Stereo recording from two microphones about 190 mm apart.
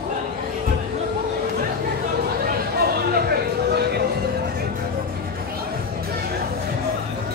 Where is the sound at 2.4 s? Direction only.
55° right (ahead or behind).